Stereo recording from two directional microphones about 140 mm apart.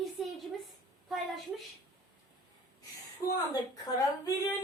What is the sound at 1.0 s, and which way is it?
Child singing, centre (ahead or behind).